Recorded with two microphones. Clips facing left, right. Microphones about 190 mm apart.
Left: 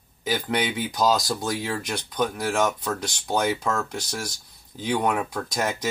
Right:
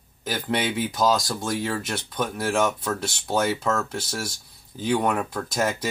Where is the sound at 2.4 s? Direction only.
10° left (ahead or behind).